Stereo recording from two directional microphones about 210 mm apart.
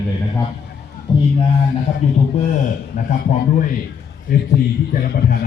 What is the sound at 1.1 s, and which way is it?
Speech, 20° left (ahead or behind).